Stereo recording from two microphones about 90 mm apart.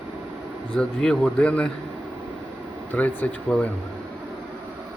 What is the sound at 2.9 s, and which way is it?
Speech, 20° left (ahead or behind).